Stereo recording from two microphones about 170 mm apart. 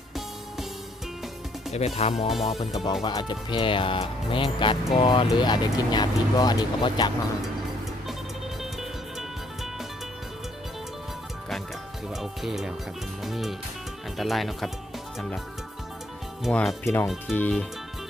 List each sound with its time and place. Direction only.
1.7 s speech: 40° left (ahead or behind)
2.8 s speech: 25° left (ahead or behind)
12.1 s speech: centre (ahead or behind)
16.4 s speech: 5° left (ahead or behind)